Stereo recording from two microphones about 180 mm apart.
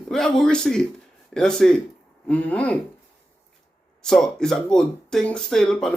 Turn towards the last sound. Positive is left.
turn(degrees=5)  # may be behind; listen again after turning